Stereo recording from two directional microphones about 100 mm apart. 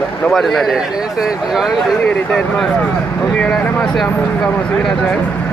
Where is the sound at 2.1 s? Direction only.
10° left (ahead or behind).